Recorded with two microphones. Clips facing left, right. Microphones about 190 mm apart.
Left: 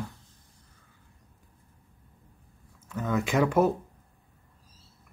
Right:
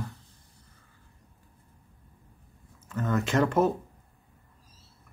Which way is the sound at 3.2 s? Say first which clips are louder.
Left 1 dB; 10° left (ahead or behind).